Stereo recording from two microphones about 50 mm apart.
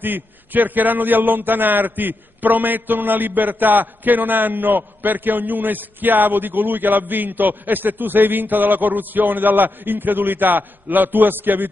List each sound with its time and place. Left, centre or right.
0.0 s a man's voice: right